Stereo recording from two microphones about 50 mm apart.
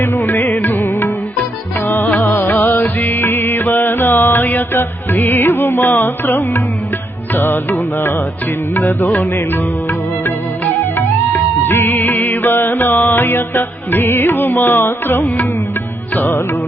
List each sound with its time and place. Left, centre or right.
0.0 s music: left
10.9 s music: left